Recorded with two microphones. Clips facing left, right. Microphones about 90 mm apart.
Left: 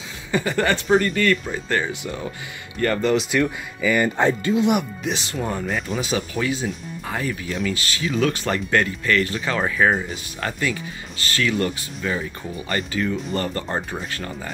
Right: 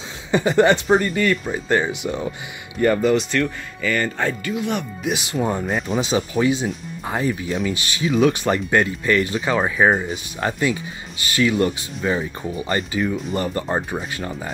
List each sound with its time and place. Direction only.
0.3 s speech: 20° right (ahead or behind); by 3.3 s 5° right (ahead or behind)
3.3 s speech: 10° left (ahead or behind); by 4.7 s 25° left (ahead or behind)
5.0 s speech: 10° right (ahead or behind)
5.7 s speech: 5° right (ahead or behind)
5.9 s speech: 20° right (ahead or behind)